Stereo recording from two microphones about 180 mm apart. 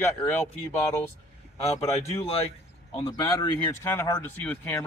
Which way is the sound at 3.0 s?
20° left (ahead or behind).